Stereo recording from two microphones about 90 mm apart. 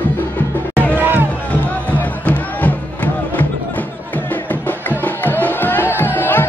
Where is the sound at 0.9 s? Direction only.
20° right (ahead or behind).